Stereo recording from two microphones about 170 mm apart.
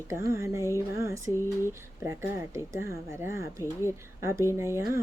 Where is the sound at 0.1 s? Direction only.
15° right (ahead or behind).